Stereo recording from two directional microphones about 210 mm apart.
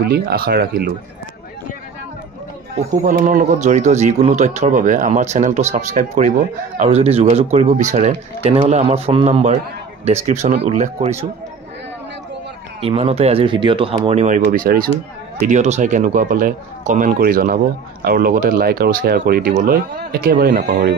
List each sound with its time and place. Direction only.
0.0 s speech: 50° right (ahead or behind)
3.1 s a man's voice: 40° right (ahead or behind)
12.8 s a man's voice: 30° right (ahead or behind); by 20.9 s 50° right (ahead or behind)